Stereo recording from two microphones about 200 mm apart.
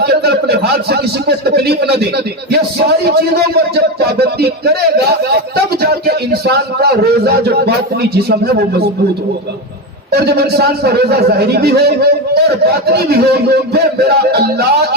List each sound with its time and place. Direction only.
0.0 s a man's voice: 55° right (ahead or behind)
10.1 s a man's voice: 50° right (ahead or behind)